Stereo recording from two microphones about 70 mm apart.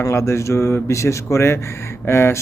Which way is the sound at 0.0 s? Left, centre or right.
Left.